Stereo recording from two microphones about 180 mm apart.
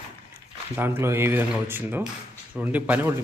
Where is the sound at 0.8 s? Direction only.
10° right (ahead or behind).